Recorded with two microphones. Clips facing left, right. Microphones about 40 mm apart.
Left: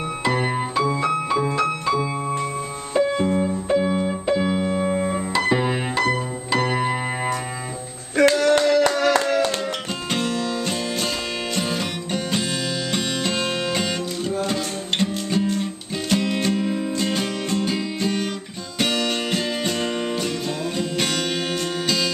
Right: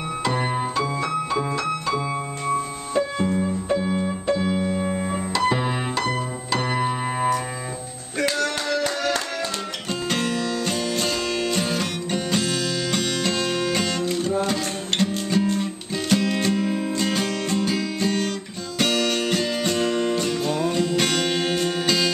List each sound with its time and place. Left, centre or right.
0.2 s music: centre
2.9 s keyboard: centre
8.5 s music: left
10.1 s music: centre